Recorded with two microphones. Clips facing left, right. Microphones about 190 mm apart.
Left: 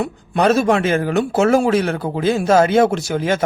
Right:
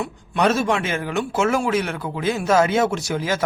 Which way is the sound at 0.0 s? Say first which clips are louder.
Left 4 dB; 35° left (ahead or behind).